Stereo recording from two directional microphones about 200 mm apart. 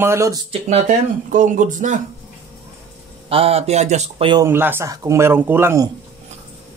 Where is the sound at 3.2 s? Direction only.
30° right (ahead or behind).